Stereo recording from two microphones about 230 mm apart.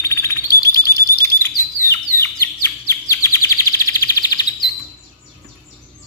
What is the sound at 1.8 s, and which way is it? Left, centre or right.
Chirp, centre.